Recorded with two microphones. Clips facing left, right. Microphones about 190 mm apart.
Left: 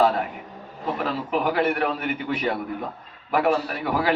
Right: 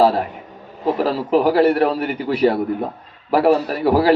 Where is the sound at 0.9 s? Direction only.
35° right (ahead or behind).